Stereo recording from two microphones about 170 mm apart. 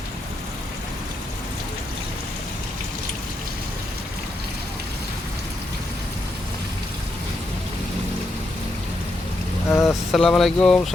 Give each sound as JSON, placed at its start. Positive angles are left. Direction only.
{"t": 9.6, "sound": "speech", "side_deg": 15}
{"t": 10.1, "sound": "speech", "side_deg": 0}